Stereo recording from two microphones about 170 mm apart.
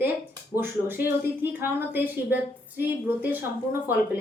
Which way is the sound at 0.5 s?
15° right (ahead or behind).